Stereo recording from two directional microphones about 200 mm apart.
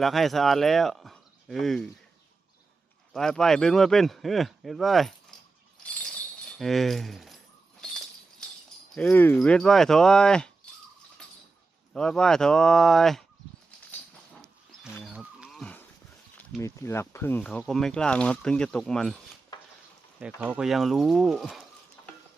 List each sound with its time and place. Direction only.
0.0 s speech: centre (ahead or behind)
3.1 s speech: centre (ahead or behind)
5.3 s a sound: 5° left (ahead or behind)
5.8 s jingle bell: 5° left (ahead or behind)
6.6 s speech: centre (ahead or behind)
7.8 s a sound: 5° left (ahead or behind)
9.0 s speech: 10° left (ahead or behind)
11.9 s speech: 5° left (ahead or behind)
14.9 s a sound: centre (ahead or behind)
16.6 s speech: 15° left (ahead or behind)
19.5 s stir: 20° left (ahead or behind)
20.1 s speech: 5° right (ahead or behind)